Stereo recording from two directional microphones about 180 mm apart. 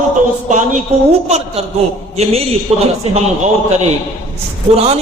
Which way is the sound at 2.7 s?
35° right (ahead or behind).